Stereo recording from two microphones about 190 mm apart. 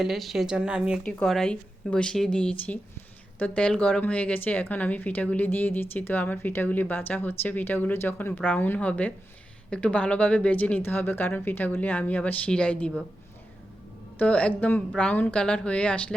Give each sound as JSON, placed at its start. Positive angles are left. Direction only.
{"t": 0.0, "sound": "speech", "side_deg": 0}
{"t": 14.2, "sound": "speech", "side_deg": 5}